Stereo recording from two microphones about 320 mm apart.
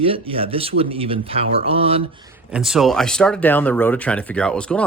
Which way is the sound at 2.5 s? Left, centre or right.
Centre.